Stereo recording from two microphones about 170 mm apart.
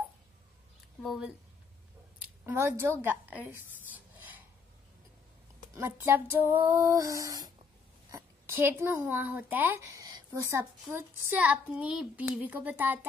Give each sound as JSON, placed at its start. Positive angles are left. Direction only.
{"t": 1.0, "sound": "speech", "side_deg": 0}
{"t": 2.1, "sound": "speech", "side_deg": -15}
{"t": 5.8, "sound": "a woman's voice", "side_deg": -15}